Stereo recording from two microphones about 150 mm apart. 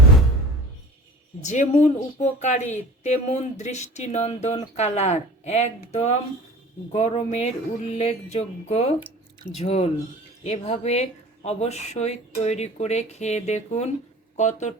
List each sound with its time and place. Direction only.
1.4 s speech: 50° left (ahead or behind)